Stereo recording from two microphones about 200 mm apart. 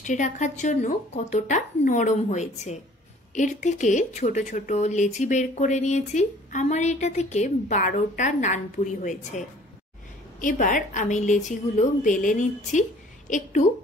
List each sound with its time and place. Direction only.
0.0 s speech: 40° left (ahead or behind)
10.4 s speech: 40° left (ahead or behind)